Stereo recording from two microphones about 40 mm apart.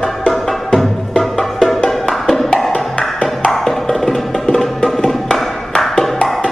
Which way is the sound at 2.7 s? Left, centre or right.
Left.